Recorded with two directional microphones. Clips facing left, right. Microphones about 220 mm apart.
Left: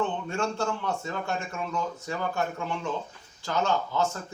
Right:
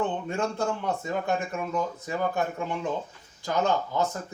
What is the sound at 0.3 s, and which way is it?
A man's voice, 15° right (ahead or behind).